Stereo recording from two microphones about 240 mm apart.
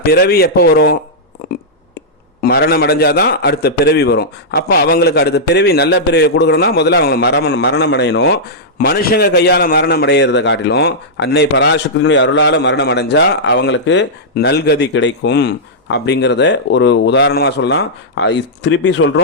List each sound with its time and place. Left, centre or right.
0.0 s a man's voice: left
2.4 s a man's voice: left